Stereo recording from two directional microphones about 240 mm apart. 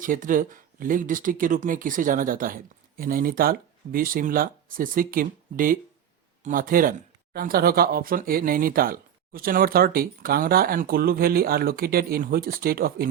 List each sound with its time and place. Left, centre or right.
0.0 s speech: right